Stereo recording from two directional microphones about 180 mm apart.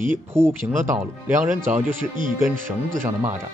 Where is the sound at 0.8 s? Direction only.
45° right (ahead or behind).